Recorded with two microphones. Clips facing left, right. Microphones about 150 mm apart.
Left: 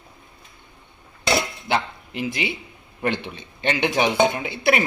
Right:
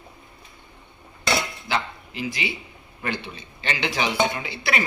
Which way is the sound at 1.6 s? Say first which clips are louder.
Left 3 dB; 60° left (ahead or behind).